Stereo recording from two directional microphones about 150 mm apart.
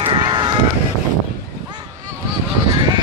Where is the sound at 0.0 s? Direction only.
35° right (ahead or behind).